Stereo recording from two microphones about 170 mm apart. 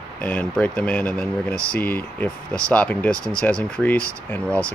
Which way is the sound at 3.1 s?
15° right (ahead or behind).